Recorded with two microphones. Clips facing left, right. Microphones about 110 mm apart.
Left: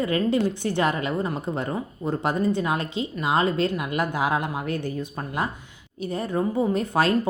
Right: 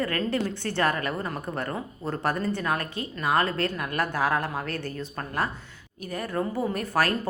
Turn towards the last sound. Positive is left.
turn(degrees=20)  # may be behind; listen again after turning